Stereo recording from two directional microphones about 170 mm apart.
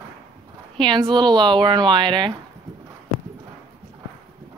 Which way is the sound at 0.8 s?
30° right (ahead or behind).